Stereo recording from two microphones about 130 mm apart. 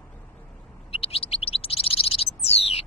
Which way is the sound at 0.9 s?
50° left (ahead or behind).